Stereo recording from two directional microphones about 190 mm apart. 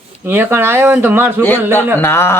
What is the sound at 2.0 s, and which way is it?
Speech, 15° left (ahead or behind).